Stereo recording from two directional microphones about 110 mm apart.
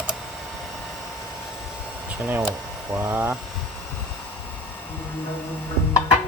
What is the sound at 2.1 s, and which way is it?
Speech, 15° right (ahead or behind).